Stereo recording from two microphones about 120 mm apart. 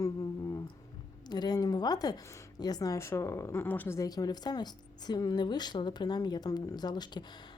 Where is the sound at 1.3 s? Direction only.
35° left (ahead or behind); by 3.9 s 15° left (ahead or behind).